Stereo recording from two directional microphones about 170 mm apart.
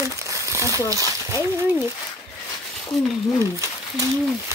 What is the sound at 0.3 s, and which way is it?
Crumpling, 15° right (ahead or behind).